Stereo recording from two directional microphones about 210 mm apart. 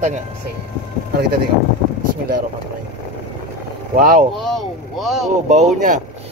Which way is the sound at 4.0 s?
40° right (ahead or behind).